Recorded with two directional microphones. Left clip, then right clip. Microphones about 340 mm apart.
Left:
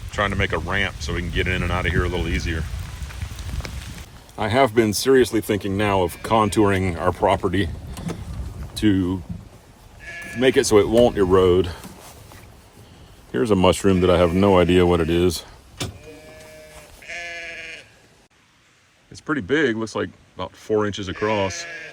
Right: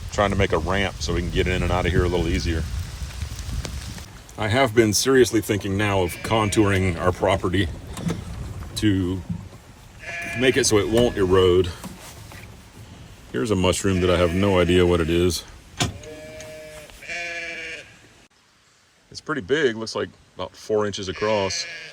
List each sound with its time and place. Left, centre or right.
0.1 s speech: centre
4.4 s speech: centre
8.7 s speech: centre
10.3 s speech: centre
13.3 s speech: left
17.1 s sheep: centre
19.1 s speech: centre